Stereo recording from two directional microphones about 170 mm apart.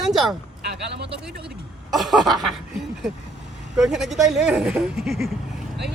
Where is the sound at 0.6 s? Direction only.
80° right.